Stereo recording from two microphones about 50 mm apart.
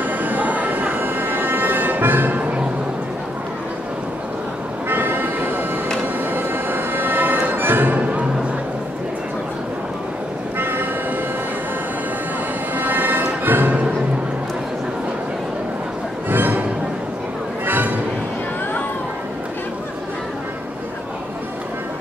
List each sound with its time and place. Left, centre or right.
0.0 s a sound: right
4.8 s vehicle: right
6.3 s music: right
10.6 s vehicle: right
12.7 s music: right
16.3 s music: right
17.6 s music: right